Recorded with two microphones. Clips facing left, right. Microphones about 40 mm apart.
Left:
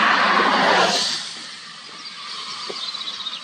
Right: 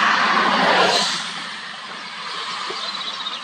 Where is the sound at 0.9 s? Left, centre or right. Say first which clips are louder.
Right 3 dB; right.